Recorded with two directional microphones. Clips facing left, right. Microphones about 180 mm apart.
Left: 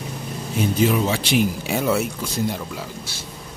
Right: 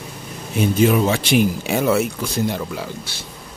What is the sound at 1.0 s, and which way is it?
Speech, 55° right (ahead or behind).